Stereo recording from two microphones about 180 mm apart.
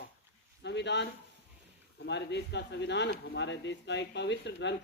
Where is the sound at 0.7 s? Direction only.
75° left (ahead or behind).